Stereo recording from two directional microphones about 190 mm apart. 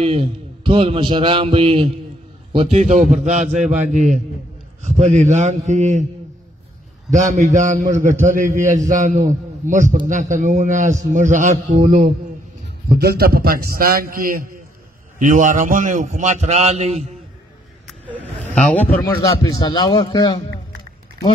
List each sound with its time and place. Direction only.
0.0 s a man's voice: 30° right (ahead or behind)
7.1 s a man's voice: 40° right (ahead or behind)
12.9 s a man's voice: 55° right (ahead or behind); by 17.0 s 35° right (ahead or behind)
18.5 s speech: 5° left (ahead or behind); by 20.3 s 25° left (ahead or behind)